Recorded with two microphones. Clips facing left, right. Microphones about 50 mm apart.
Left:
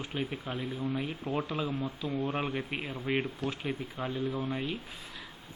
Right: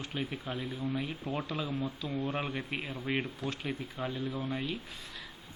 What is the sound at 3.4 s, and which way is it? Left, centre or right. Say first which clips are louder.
Speech: left 2 dB; left.